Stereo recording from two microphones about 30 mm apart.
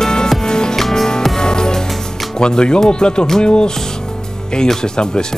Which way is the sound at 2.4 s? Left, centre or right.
Left.